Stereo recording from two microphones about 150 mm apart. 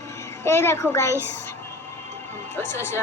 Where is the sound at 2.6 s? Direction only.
15° left (ahead or behind).